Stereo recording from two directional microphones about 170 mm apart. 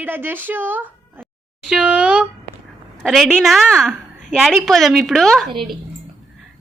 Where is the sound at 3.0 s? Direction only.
Centre (ahead or behind).